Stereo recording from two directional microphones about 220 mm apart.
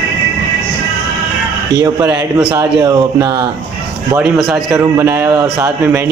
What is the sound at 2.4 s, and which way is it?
Speech, 5° right (ahead or behind).